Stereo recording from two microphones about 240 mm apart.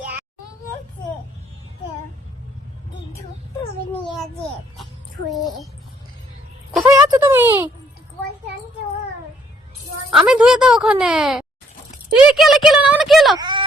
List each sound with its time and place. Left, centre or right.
5.3 s speech: centre
6.8 s a sound: centre
10.1 s speech: centre
13.4 s wail: centre